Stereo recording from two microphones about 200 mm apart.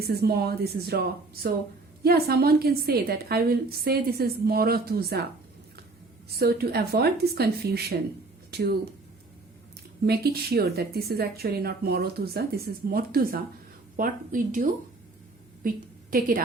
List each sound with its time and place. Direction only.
0.0 s speech: 50° right (ahead or behind)
6.3 s speech: 50° right (ahead or behind)
10.1 s a woman's voice: 50° right (ahead or behind)